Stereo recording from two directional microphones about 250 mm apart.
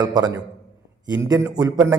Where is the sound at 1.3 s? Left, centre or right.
Centre.